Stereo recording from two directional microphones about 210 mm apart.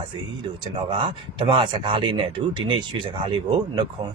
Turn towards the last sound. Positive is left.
turn(degrees=-20)  # may be behind; listen again after turning